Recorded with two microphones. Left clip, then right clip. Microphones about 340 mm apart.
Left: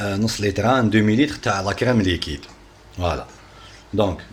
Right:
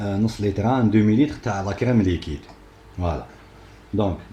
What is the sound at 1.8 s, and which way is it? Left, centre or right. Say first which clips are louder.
Speech: even; left.